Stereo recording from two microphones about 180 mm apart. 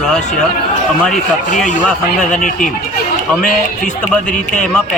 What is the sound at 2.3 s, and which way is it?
Speech, 45° left (ahead or behind).